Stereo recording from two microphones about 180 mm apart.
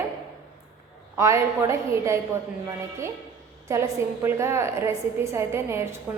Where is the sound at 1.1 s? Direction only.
15° right (ahead or behind).